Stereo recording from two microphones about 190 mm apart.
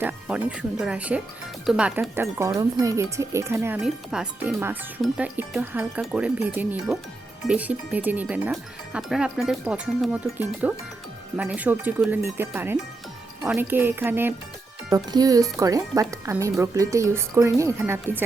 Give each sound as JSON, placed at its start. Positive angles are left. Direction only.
{"t": 0.0, "sound": "speech", "side_deg": -10}
{"t": 2.4, "sound": "speech", "side_deg": -20}
{"t": 3.8, "sound": "speech", "side_deg": -5}